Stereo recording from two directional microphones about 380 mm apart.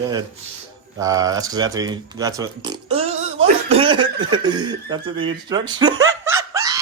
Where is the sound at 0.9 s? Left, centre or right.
Centre.